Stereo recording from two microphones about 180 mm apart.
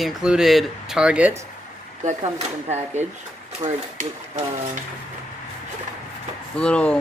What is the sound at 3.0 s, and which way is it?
Speech, 40° right (ahead or behind).